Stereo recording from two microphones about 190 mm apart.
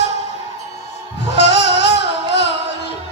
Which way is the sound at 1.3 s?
65° left (ahead or behind).